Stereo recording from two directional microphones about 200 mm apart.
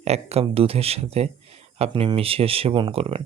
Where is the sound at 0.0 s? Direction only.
30° right (ahead or behind).